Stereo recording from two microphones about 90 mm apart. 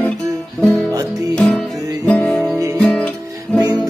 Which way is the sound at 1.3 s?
5° left (ahead or behind).